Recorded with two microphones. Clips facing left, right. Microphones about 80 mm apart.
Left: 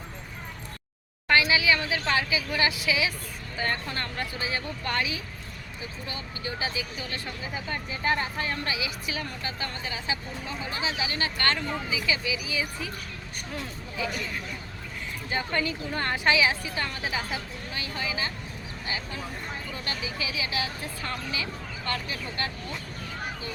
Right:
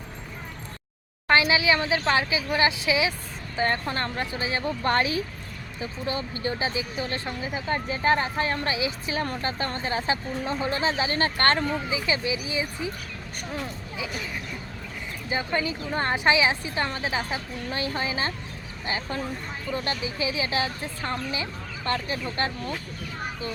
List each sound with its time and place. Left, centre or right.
1.3 s a woman's voice: right
15.3 s a woman's voice: centre; by 22.5 s right